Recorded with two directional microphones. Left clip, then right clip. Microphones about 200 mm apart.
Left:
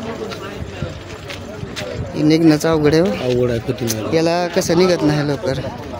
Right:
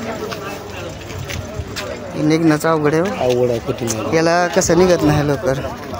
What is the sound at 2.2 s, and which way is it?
A man's voice, 35° left (ahead or behind).